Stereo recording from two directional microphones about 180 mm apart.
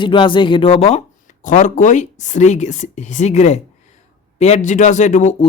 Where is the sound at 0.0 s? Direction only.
25° left (ahead or behind).